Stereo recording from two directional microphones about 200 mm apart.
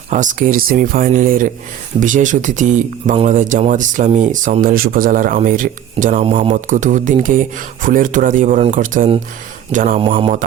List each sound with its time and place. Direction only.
0.1 s speech: 40° right (ahead or behind)
10.0 s speech: 25° right (ahead or behind)